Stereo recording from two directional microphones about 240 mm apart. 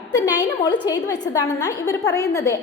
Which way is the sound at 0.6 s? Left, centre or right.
Centre.